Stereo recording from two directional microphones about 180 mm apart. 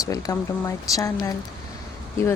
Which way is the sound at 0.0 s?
20° left (ahead or behind).